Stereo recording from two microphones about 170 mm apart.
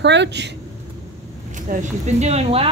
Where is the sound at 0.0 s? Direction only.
90° right.